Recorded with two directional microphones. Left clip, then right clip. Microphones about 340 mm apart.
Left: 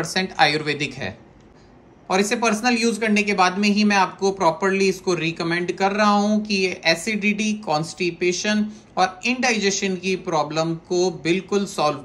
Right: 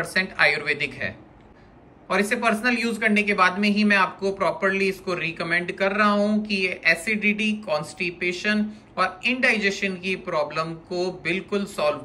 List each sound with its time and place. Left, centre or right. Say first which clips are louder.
0.0 s speech: left 1 dB; centre